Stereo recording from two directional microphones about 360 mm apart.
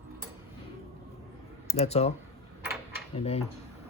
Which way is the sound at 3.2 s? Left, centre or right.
Centre.